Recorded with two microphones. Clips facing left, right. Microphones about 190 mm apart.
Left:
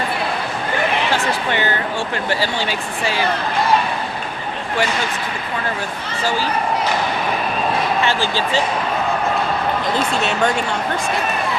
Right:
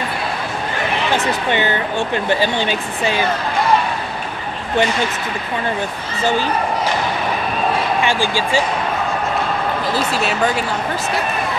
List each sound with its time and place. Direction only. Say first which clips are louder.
1.1 s speech: right 2 dB; 20° right (ahead or behind)
8.0 s speech: right 1 dB; 10° right (ahead or behind)
9.9 s speech: even; 5° right (ahead or behind)